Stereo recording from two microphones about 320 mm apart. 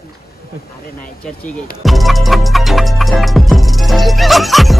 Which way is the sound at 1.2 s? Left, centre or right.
Centre.